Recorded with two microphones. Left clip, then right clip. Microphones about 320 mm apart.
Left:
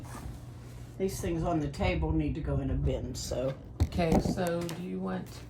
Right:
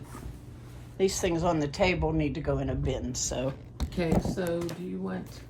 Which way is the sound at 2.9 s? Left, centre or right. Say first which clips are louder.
Right 3 dB; right.